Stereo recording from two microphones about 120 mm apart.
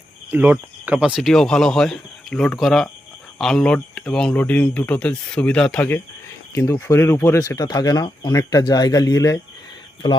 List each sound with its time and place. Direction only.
0.3 s speech: 15° right (ahead or behind); by 5.9 s 5° left (ahead or behind)
6.5 s speech: 20° left (ahead or behind)
7.3 s speech: 30° left (ahead or behind)